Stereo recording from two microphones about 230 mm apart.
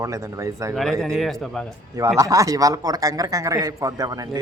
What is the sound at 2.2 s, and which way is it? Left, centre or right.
A man's voice, centre.